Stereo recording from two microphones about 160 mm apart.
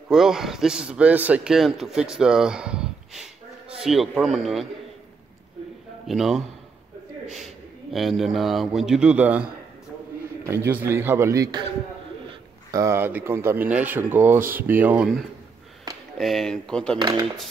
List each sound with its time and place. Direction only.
0.1 s a man's voice: 5° right (ahead or behind)
6.0 s a man's voice: centre (ahead or behind); by 11.6 s 20° right (ahead or behind)
12.7 s speech: 15° right (ahead or behind)
16.2 s a man's voice: centre (ahead or behind)
17.0 s speech: 25° right (ahead or behind)